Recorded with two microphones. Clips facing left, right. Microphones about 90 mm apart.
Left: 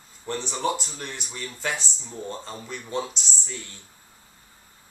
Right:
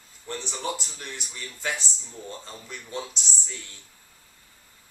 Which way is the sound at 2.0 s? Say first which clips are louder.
Left 5 dB; 20° left (ahead or behind).